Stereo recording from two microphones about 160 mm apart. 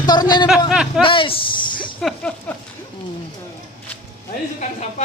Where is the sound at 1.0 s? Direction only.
35° left (ahead or behind).